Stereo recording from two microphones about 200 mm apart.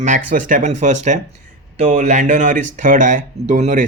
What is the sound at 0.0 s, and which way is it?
A man's voice, 40° right (ahead or behind).